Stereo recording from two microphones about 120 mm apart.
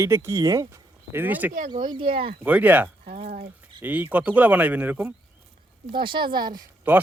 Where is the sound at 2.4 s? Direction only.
10° right (ahead or behind).